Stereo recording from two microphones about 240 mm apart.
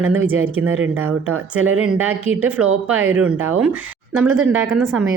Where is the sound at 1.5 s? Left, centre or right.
Right.